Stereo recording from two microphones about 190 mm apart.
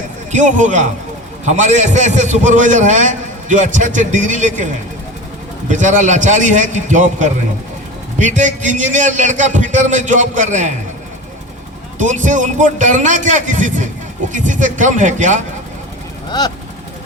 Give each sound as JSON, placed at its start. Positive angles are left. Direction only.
{"t": 0.3, "sound": "a man's voice", "side_deg": -40}
{"t": 11.9, "sound": "a man's voice", "side_deg": -40}